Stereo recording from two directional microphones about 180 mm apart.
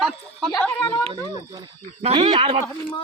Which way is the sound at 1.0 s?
25° right (ahead or behind).